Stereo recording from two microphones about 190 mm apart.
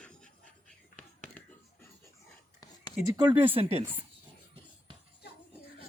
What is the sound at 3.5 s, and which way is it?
Speech, 30° right (ahead or behind).